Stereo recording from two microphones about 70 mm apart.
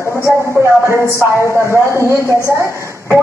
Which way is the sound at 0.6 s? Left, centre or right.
Right.